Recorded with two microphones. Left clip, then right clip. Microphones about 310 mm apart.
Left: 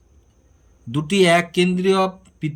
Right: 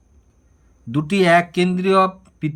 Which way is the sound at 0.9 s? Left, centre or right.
Centre.